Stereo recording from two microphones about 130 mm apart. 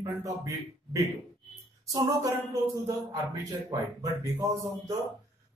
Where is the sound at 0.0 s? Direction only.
25° right (ahead or behind).